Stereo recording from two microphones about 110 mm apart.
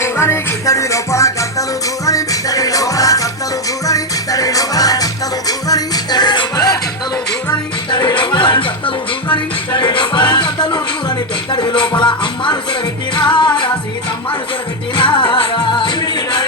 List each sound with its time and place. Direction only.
0.0 s music: 25° left (ahead or behind)
7.9 s music: 45° left (ahead or behind)
14.9 s music: 50° left (ahead or behind)